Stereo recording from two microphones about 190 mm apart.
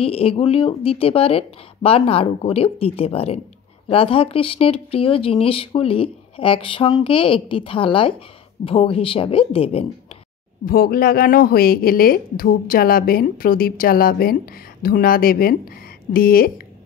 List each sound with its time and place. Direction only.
0.0 s speech: 30° left (ahead or behind)
10.6 s speech: 50° left (ahead or behind)